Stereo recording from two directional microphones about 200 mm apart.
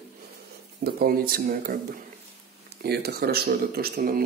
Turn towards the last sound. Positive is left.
turn(degrees=-50)  # may be behind; listen again after turning